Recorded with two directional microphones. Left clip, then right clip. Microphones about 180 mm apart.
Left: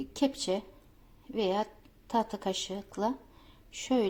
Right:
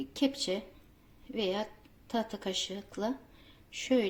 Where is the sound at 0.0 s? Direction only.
10° left (ahead or behind).